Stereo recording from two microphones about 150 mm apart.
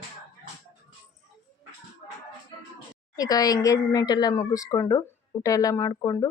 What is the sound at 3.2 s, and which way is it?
Speech, 25° left (ahead or behind).